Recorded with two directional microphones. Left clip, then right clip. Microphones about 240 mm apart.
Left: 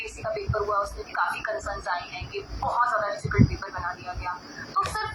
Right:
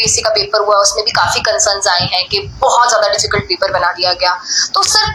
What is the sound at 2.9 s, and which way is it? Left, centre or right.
A woman's voice, right.